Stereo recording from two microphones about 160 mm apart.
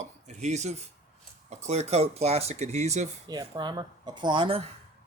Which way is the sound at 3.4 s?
30° right (ahead or behind).